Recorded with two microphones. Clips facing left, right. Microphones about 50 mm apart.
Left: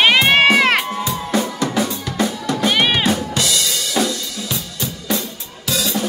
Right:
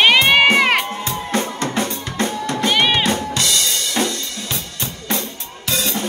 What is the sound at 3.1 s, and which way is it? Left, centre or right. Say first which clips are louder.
Drum kit: left 1 dB; right.